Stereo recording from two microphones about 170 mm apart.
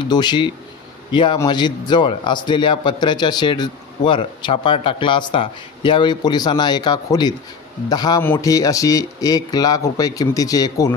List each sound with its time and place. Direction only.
0.1 s a man's voice: 25° left (ahead or behind)